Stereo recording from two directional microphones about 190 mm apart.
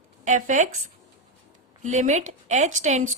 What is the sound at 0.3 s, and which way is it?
Speech, 40° right (ahead or behind).